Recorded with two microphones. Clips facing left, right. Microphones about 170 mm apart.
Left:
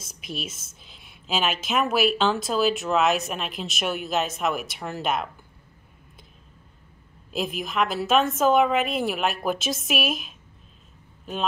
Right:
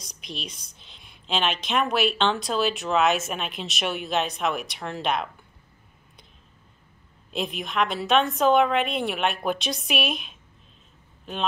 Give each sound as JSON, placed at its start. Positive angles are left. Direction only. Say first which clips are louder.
{"t": 0.0, "sound": "a woman's voice", "louder": "left 3 dB", "side_deg": 5}
{"t": 7.3, "sound": "a woman's voice", "louder": "left 1 dB", "side_deg": 0}